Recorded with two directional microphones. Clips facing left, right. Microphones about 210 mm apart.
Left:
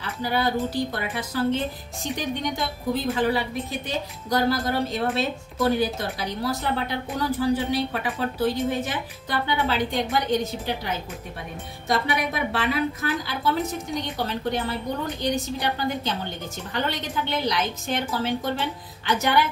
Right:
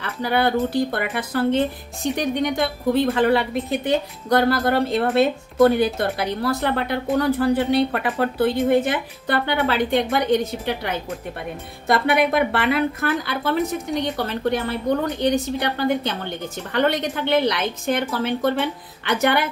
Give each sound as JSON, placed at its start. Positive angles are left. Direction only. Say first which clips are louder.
{"t": 0.0, "sound": "a woman's voice", "louder": "right 4 dB", "side_deg": -60}